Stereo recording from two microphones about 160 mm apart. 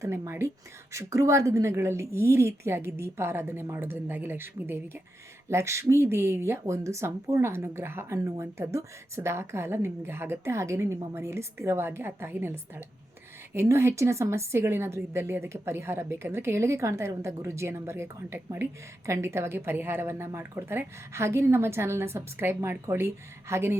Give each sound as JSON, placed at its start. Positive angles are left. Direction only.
{"t": 0.0, "sound": "a woman's voice", "side_deg": -15}